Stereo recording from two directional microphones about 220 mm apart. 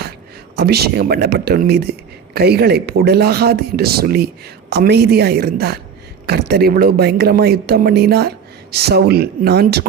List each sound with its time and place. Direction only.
0.5 s speech: 45° right (ahead or behind)